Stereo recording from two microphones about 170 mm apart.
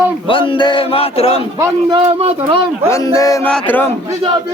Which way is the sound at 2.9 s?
20° left (ahead or behind).